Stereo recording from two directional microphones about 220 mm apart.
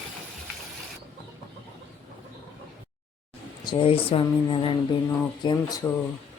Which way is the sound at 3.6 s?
20° left (ahead or behind).